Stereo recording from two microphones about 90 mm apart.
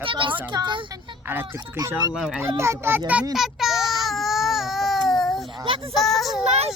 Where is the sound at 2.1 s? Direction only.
5° right (ahead or behind).